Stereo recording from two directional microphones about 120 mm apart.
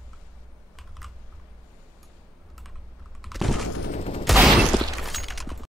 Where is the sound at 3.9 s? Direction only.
55° left (ahead or behind).